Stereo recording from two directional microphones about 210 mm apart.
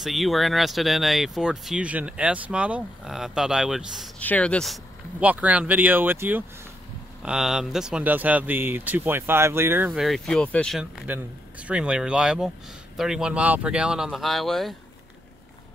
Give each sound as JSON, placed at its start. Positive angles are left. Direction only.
{"t": 0.0, "sound": "speech", "side_deg": 0}
{"t": 5.2, "sound": "speech", "side_deg": -5}